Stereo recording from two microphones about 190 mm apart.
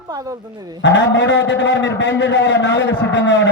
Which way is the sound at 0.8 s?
70° left (ahead or behind).